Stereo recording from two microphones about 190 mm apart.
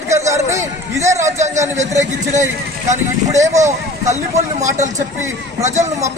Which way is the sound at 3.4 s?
15° right (ahead or behind).